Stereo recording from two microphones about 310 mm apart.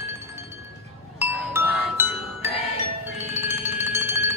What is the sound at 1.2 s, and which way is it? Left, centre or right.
Music, centre.